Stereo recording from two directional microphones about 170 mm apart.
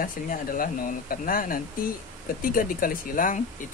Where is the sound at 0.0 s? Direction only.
55° left (ahead or behind).